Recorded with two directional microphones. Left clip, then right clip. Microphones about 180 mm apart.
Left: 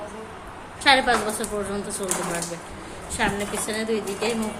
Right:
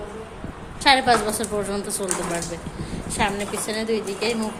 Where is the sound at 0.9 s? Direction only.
20° right (ahead or behind).